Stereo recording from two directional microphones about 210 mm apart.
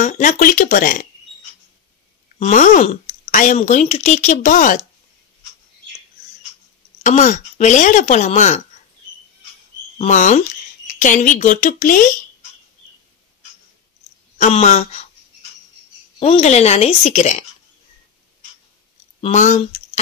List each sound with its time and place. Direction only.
0.0 s a woman's voice: 40° left (ahead or behind)
2.3 s a woman's voice: 35° left (ahead or behind)
7.0 s a woman's voice: 35° left (ahead or behind)
9.9 s a woman's voice: 35° left (ahead or behind)
14.4 s a woman's voice: 30° left (ahead or behind)
16.2 s a woman's voice: 30° left (ahead or behind)
19.2 s a woman's voice: 35° left (ahead or behind)